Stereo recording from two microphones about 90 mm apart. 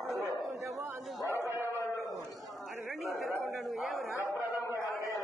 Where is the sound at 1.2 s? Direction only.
35° left (ahead or behind).